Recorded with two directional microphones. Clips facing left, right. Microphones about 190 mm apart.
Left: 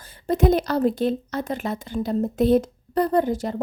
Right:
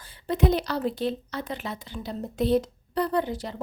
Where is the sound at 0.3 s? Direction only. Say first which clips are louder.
Left 5 dB; 45° left (ahead or behind).